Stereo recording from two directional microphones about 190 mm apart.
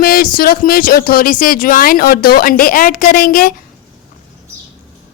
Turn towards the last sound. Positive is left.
turn(degrees=50)  # may be behind; listen again after turning